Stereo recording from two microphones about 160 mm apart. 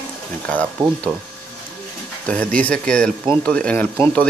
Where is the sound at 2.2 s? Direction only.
5° left (ahead or behind).